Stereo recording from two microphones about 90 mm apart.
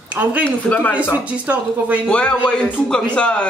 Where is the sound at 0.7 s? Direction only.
20° left (ahead or behind).